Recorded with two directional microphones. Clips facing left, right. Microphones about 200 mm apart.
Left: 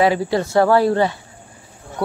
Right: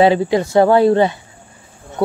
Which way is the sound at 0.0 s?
20° right (ahead or behind).